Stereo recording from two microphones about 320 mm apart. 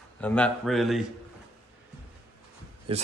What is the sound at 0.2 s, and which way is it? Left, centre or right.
Speech, centre.